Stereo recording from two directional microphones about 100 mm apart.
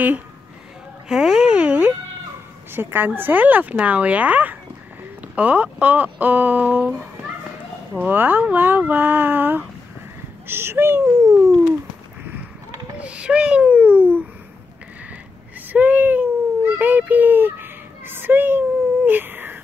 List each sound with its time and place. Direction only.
1.0 s music: 5° right (ahead or behind)
2.7 s speech: 20° right (ahead or behind)
11.1 s speech: 35° right (ahead or behind)
13.0 s a child's voice: 10° right (ahead or behind)
15.7 s speech: 15° right (ahead or behind)
19.0 s a sound: 20° right (ahead or behind)